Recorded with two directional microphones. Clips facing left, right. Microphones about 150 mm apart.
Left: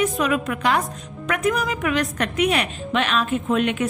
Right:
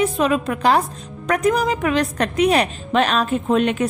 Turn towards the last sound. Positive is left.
turn(degrees=-35)  # may be behind; listen again after turning